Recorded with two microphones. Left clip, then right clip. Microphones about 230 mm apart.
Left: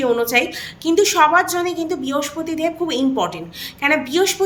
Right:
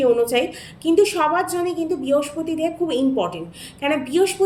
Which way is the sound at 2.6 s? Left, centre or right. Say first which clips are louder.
Left 2 dB; centre.